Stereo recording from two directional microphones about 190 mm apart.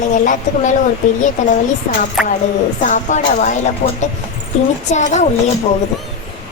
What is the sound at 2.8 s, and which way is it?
Speech, 40° left (ahead or behind).